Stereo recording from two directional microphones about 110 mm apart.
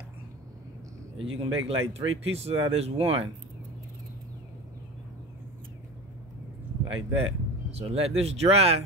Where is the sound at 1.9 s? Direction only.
65° right (ahead or behind).